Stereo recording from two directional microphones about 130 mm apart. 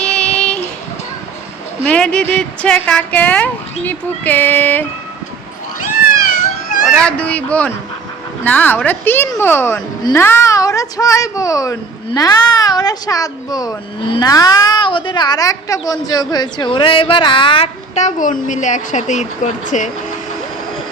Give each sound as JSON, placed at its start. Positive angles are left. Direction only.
{"t": 0.0, "sound": "child singing", "side_deg": 5}
{"t": 1.9, "sound": "speech", "side_deg": 10}
{"t": 6.8, "sound": "speech", "side_deg": 5}
{"t": 10.0, "sound": "speech", "side_deg": 30}
{"t": 17.9, "sound": "speech", "side_deg": 70}